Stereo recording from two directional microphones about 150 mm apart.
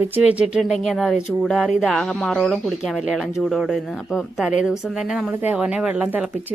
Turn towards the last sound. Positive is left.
turn(degrees=-10)  # may be behind; listen again after turning